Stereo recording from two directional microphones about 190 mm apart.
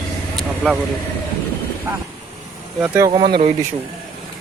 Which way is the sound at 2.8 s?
10° right (ahead or behind).